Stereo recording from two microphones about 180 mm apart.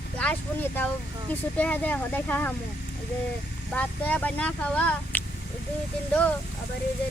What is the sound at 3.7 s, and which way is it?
Speech, 10° left (ahead or behind).